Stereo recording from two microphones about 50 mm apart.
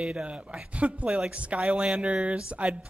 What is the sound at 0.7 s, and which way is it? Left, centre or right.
Speech, right.